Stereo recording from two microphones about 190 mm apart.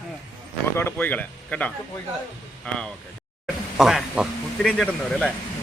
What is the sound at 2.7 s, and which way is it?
A man's voice, 5° left (ahead or behind).